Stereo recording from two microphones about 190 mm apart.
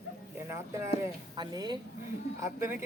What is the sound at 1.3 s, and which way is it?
Speech, 20° right (ahead or behind).